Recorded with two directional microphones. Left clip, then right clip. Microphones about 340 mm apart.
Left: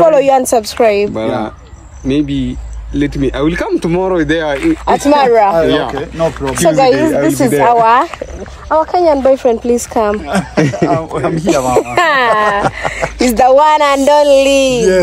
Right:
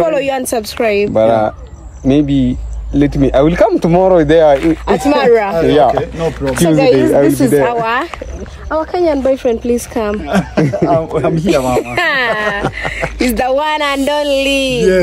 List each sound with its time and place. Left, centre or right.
0.0 s speech: centre
1.1 s speech: right
4.8 s speech: centre
6.1 s a man's voice: centre
11.4 s speech: centre